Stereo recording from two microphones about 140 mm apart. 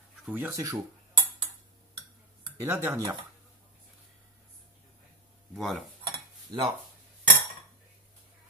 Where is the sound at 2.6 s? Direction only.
15° right (ahead or behind).